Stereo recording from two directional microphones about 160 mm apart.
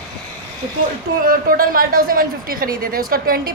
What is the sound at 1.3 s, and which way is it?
A woman's voice, 65° right (ahead or behind).